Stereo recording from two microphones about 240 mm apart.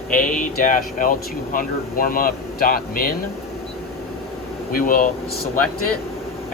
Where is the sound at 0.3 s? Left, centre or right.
Left.